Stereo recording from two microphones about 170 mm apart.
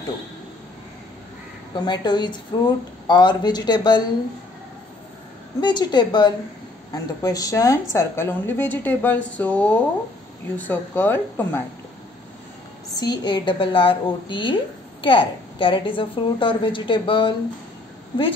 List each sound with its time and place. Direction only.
1.8 s a woman's voice: 25° left (ahead or behind)
5.6 s a woman's voice: 25° left (ahead or behind); by 11.6 s 10° left (ahead or behind)
12.9 s a woman's voice: 25° left (ahead or behind)